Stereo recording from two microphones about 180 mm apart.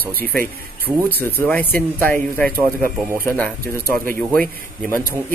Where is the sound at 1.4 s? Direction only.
10° left (ahead or behind).